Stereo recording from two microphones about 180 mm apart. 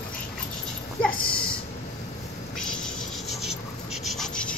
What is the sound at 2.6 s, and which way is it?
Rub, 5° left (ahead or behind).